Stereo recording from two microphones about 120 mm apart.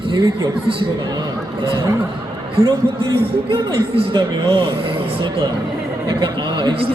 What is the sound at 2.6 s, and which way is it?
A man's voice, 50° right (ahead or behind).